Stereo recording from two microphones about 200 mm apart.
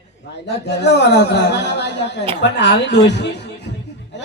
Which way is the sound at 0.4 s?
60° left (ahead or behind).